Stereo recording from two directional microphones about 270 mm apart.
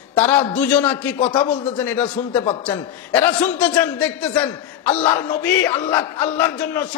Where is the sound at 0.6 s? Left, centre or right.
Centre.